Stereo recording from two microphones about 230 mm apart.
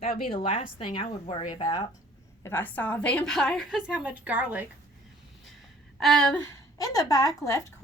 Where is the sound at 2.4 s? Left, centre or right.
Centre.